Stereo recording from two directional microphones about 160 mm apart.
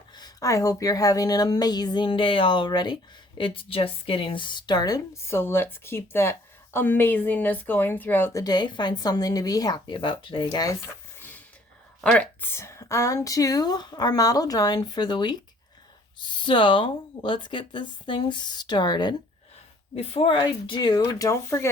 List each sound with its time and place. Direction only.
0.2 s a woman's voice: 20° left (ahead or behind)
11.2 s a sound: 10° left (ahead or behind)
12.1 s a woman's voice: 10° left (ahead or behind)